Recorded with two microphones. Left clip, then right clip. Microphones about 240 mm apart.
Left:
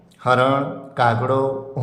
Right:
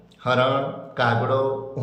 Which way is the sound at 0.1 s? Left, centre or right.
Centre.